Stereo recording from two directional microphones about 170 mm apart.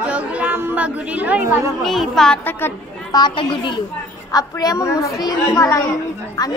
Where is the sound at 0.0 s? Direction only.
10° right (ahead or behind).